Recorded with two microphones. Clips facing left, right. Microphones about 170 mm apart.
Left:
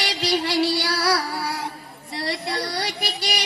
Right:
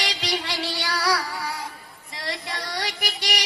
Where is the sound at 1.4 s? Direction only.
70° left (ahead or behind).